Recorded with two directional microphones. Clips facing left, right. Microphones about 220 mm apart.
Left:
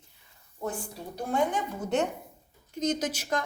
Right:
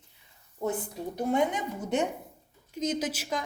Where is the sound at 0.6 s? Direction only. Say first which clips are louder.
Right 4 dB; 20° right (ahead or behind).